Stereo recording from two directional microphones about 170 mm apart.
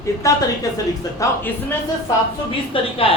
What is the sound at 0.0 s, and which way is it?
Speech, 20° left (ahead or behind).